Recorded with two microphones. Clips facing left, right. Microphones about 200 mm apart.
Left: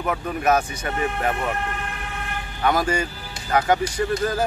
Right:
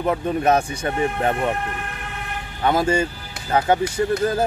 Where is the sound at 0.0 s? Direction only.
30° right (ahead or behind).